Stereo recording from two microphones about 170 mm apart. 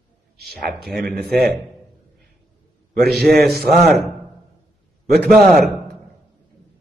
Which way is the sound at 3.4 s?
65° right (ahead or behind).